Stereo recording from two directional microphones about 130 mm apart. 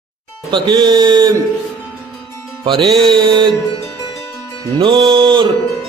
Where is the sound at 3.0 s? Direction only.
40° right (ahead or behind).